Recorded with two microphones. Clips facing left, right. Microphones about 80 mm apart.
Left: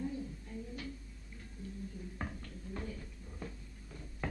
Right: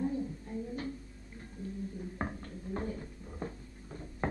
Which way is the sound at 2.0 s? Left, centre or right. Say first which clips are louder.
Right 5 dB; right.